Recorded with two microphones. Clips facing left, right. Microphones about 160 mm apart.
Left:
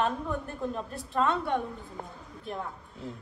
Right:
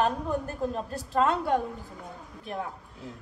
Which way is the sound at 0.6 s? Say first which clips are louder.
Right 3 dB; 35° right (ahead or behind).